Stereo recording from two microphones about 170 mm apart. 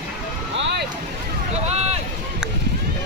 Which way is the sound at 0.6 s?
90° right.